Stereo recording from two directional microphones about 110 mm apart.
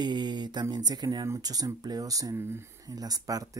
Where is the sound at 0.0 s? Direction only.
40° right (ahead or behind).